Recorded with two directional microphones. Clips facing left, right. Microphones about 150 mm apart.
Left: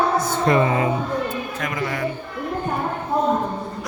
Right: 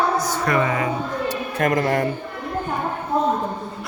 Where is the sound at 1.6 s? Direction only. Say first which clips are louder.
Right 8 dB; 50° right (ahead or behind).